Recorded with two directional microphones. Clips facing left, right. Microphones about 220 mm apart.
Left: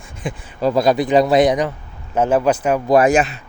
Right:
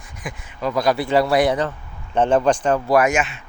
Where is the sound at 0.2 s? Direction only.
30° left (ahead or behind); by 2.9 s 10° left (ahead or behind).